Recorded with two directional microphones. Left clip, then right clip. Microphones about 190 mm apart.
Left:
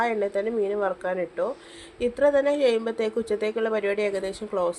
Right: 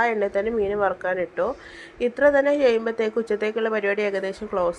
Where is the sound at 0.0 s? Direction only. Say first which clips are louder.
Right 3 dB; 15° right (ahead or behind).